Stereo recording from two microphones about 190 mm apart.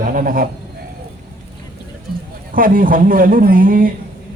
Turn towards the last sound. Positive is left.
turn(degrees=-45)  # may be behind; listen again after turning